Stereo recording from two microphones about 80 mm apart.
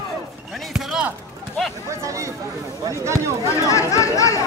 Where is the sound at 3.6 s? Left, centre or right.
Left.